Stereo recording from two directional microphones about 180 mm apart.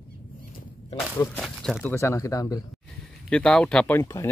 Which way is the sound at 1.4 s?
Centre (ahead or behind).